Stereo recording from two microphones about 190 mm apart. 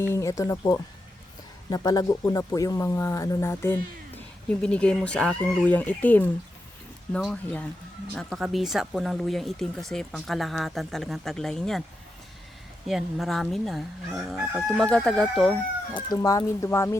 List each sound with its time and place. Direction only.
0.0 s speech: 15° left (ahead or behind)
12.9 s speech: centre (ahead or behind)
16.0 s speech: 20° left (ahead or behind)